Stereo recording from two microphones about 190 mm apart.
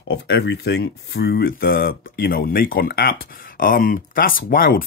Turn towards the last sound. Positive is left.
turn(degrees=50)  # may be behind; listen again after turning